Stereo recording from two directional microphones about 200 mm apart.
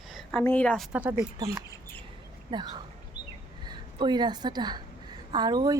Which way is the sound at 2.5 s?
20° right (ahead or behind).